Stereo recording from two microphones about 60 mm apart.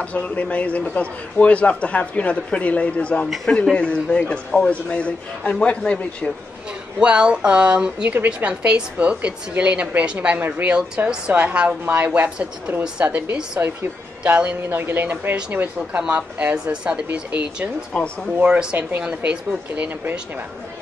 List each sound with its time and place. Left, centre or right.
0.0 s a man's voice: left
7.0 s a woman's voice: centre
11.1 s a woman's voice: centre
14.8 s speech: right
16.0 s a woman's voice: centre